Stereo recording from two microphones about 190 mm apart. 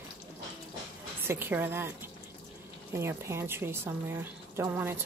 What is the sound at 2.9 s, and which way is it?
Speech, 15° right (ahead or behind).